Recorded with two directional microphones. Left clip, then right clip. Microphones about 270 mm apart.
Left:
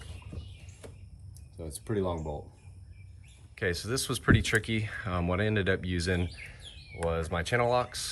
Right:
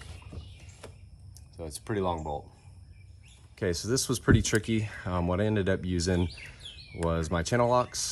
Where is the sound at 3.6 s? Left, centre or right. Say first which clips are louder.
Right 2 dB; centre.